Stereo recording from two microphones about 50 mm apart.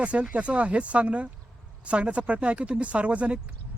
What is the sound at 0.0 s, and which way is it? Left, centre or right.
Speech, right.